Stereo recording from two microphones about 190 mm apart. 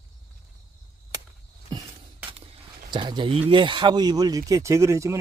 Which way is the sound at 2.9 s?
25° right (ahead or behind).